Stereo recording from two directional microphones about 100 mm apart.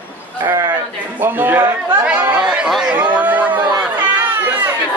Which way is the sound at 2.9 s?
15° right (ahead or behind).